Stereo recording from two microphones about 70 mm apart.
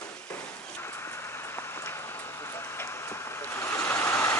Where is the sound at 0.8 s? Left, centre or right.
Left.